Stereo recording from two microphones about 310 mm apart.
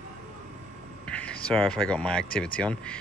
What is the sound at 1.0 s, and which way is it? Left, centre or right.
Speech, centre.